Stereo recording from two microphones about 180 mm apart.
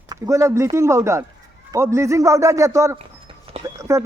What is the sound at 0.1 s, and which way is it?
A man's voice, 20° right (ahead or behind).